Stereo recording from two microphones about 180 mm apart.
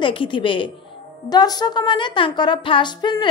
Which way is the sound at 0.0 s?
30° left (ahead or behind).